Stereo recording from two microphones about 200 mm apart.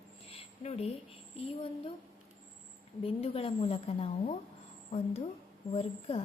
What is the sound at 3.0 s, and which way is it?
A woman's voice, 30° left (ahead or behind).